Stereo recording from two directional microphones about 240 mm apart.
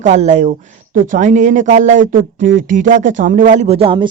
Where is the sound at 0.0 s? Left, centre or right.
Right.